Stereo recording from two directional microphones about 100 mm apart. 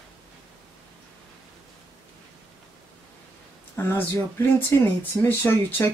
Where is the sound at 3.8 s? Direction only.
25° left (ahead or behind).